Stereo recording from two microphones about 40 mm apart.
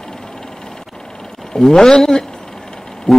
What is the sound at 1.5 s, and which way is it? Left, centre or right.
Speech, centre.